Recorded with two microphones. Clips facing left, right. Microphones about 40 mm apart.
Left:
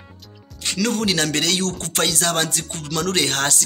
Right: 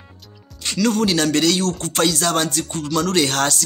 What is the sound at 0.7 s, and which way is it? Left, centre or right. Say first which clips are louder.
Speech: right 3 dB; left.